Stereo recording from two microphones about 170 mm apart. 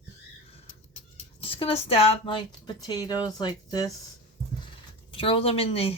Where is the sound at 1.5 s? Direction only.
30° left (ahead or behind).